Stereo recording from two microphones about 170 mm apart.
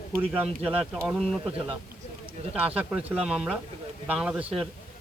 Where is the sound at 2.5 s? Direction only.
10° right (ahead or behind).